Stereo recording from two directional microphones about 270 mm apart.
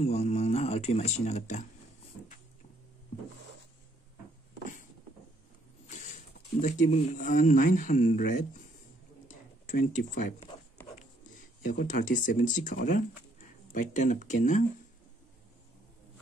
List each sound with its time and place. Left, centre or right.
0.0 s speech: left
5.9 s rodents: left
6.6 s speech: left
9.7 s speech: left
11.6 s speech: left